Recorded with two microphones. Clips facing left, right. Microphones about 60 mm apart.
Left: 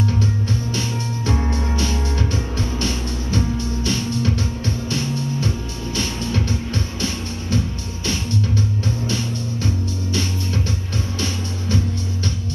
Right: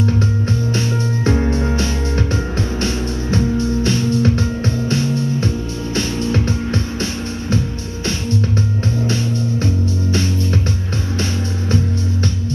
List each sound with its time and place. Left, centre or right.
0.0 s music: right